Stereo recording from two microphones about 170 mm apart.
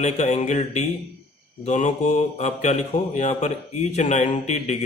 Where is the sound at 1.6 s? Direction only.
45° left (ahead or behind).